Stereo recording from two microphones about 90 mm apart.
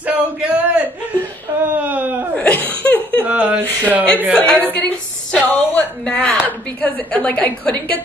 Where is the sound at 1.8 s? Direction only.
20° right (ahead or behind).